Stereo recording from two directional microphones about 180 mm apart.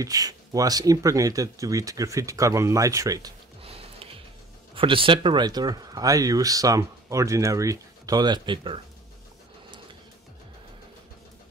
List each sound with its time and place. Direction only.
0.0 s speech: 20° right (ahead or behind)
3.6 s music: 30° right (ahead or behind)
4.7 s speech: 30° right (ahead or behind)